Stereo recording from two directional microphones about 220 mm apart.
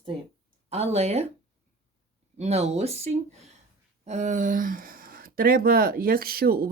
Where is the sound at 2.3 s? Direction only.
30° right (ahead or behind).